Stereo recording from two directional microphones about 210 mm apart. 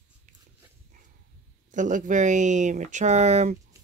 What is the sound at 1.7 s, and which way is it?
Speech, 35° right (ahead or behind).